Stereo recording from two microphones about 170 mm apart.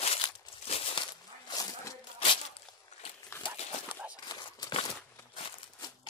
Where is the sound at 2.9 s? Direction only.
45° left (ahead or behind).